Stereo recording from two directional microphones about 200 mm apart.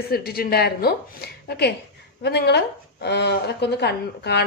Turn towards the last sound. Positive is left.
turn(degrees=55)  # may be behind; listen again after turning